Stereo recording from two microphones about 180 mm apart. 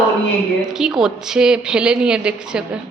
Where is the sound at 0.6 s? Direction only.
5° right (ahead or behind).